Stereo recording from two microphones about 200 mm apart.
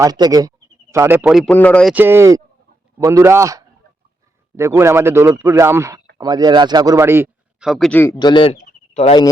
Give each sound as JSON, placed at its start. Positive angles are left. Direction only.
{"t": 0.0, "sound": "a man's voice", "side_deg": -20}
{"t": 1.9, "sound": "a man's voice", "side_deg": -10}
{"t": 7.7, "sound": "speech", "side_deg": 5}
{"t": 8.2, "sound": "speech", "side_deg": 25}